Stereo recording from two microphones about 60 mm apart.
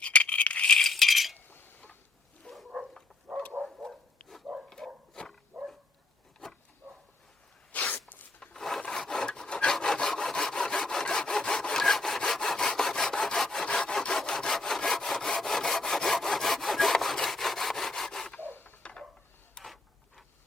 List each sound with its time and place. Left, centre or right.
0.0 s a sound: left; by 1.4 s centre
1.5 s a sound: left
3.5 s dog: right
4.2 s dog: centre
5.5 s dog: centre
7.7 s sneeze: left
8.4 s filing: centre
8.9 s rub: centre
9.7 s sawing: centre
18.3 s printer: left
18.8 s a sound: centre
19.6 s a sound: centre